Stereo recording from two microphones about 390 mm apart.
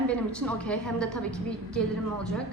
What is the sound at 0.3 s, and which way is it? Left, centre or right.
A woman's voice, centre.